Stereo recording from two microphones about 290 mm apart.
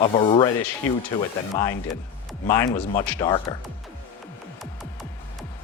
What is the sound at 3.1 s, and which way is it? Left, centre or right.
Speech, centre.